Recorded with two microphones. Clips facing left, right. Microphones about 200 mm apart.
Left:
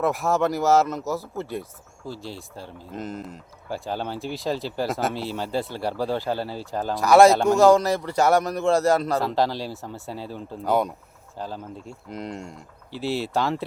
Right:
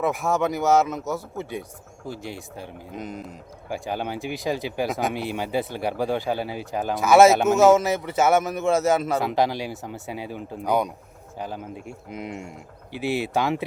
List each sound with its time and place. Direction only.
0.0 s a man's voice: centre (ahead or behind)
2.0 s speech: 15° right (ahead or behind)
2.9 s a man's voice: centre (ahead or behind)
3.7 s speech: 15° right (ahead or behind)
6.9 s a man's voice: centre (ahead or behind)
9.2 s speech: 15° right (ahead or behind)
10.7 s a man's voice: centre (ahead or behind)
11.3 s speech: 15° right (ahead or behind)
12.0 s a man's voice: 5° right (ahead or behind)
13.0 s speech: 15° right (ahead or behind)